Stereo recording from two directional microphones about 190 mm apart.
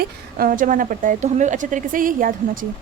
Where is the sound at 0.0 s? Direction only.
50° right (ahead or behind).